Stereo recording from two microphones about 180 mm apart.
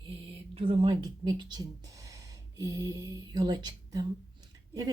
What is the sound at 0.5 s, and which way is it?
Speech, 30° right (ahead or behind).